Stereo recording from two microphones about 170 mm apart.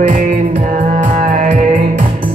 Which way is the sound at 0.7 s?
50° right (ahead or behind).